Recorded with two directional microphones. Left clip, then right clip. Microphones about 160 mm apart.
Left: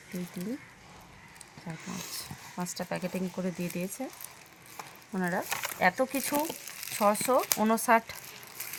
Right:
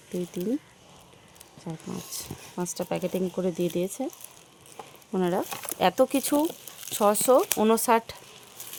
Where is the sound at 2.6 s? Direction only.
90° right.